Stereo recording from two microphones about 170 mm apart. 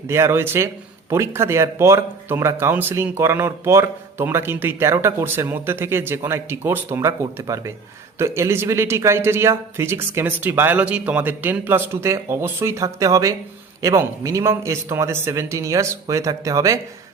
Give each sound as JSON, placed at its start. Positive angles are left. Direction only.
{"t": 0.1, "sound": "speech", "side_deg": -15}